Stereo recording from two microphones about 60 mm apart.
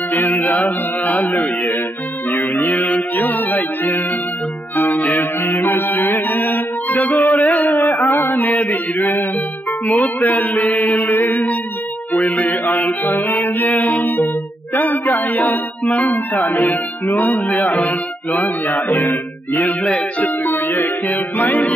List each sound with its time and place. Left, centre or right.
0.1 s mantra: left
2.4 s music: left
7.4 s mantra: left
9.8 s chant: left
11.1 s music: left
15.9 s chant: left
17.8 s music: left
19.8 s music: centre
20.2 s music: left